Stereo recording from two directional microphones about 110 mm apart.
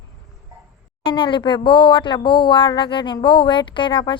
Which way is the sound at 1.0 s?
50° left (ahead or behind).